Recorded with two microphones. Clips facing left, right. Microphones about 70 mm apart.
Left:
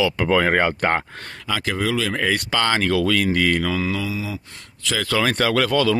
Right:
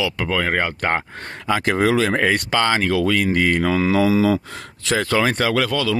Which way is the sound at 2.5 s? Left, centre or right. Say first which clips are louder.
Right 1 dB; centre.